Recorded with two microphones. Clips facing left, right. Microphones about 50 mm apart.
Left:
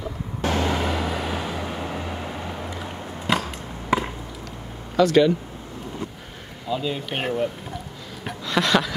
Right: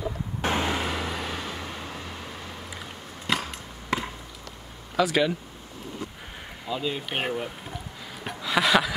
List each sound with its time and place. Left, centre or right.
0.4 s vehicle: right
0.7 s vehicle: centre; by 2.7 s left
3.3 s chop: centre
4.9 s speech: centre
6.7 s speech: centre
8.2 s a sound: centre